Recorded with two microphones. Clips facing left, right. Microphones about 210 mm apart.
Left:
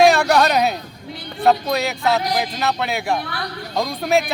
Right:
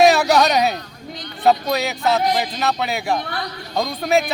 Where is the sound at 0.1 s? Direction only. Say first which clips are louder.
Even; 5° right (ahead or behind).